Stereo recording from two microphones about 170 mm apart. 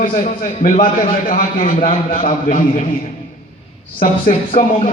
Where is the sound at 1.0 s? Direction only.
55° left (ahead or behind).